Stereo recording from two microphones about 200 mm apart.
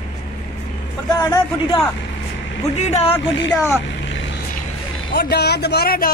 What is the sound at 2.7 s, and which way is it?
Speech, 35° left (ahead or behind).